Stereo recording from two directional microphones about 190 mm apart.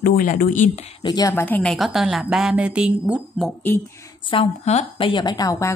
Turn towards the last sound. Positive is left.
turn(degrees=15)  # may be behind; listen again after turning